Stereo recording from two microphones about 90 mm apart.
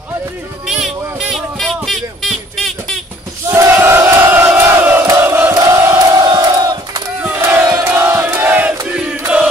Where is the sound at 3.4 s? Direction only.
30° right (ahead or behind).